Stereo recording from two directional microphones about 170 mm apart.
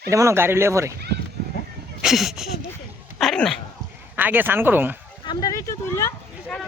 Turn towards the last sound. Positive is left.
turn(degrees=15)  # may be behind; listen again after turning